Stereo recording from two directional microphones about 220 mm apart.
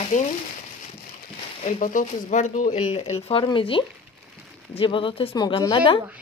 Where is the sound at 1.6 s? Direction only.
35° left (ahead or behind).